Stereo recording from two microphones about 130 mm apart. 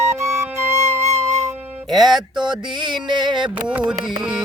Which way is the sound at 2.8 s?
35° right (ahead or behind).